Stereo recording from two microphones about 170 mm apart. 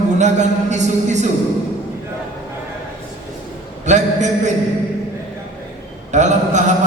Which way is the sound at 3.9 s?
45° right (ahead or behind).